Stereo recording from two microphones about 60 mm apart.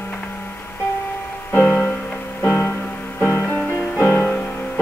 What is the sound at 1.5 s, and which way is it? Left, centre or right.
Music, left.